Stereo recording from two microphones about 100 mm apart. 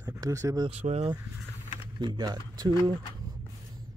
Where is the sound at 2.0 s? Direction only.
45° right (ahead or behind).